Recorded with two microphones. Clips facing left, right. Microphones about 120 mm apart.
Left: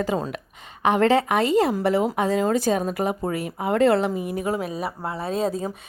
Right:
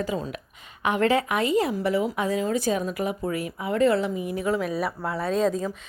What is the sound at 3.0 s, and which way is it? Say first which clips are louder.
Speech: left 2 dB; 30° left (ahead or behind).